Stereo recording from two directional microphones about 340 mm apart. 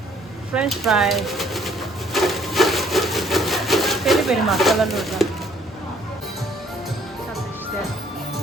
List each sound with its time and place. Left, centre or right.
0.5 s pigeon: centre